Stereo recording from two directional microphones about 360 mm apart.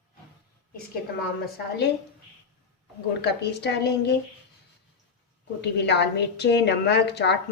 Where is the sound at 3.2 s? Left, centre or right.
Left.